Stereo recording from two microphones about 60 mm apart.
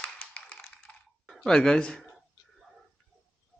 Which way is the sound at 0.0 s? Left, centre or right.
Centre.